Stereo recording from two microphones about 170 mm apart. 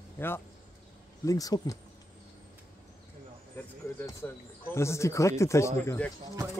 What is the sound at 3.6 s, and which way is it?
Speech, 15° left (ahead or behind).